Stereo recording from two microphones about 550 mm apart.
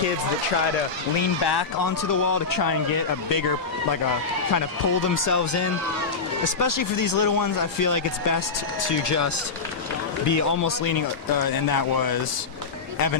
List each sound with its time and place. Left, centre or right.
1.4 s speech: left
4.6 s speech: left